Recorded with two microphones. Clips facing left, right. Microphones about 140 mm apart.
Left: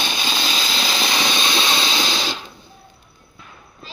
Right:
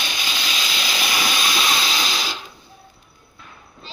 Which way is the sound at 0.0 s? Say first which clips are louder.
Left 4 dB; 30° left (ahead or behind).